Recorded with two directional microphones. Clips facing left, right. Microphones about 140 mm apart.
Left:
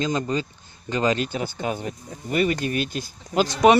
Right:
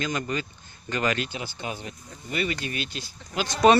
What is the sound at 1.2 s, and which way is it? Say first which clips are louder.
Speech: left 6 dB; 40° left (ahead or behind).